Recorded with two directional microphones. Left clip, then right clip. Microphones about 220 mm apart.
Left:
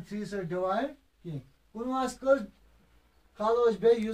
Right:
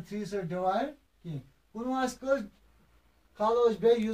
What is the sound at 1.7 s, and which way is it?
Speech, 10° left (ahead or behind).